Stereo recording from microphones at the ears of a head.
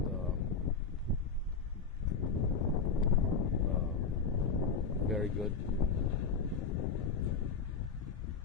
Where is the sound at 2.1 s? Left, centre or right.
Left.